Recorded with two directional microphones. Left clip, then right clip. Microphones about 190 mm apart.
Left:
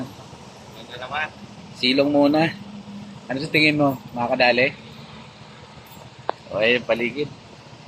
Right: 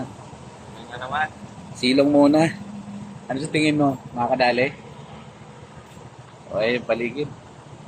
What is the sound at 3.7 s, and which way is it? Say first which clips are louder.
Speech: left 1 dB; 20° left (ahead or behind).